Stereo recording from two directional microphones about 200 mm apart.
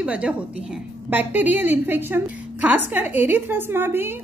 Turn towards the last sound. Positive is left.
turn(degrees=-10)  # may be behind; listen again after turning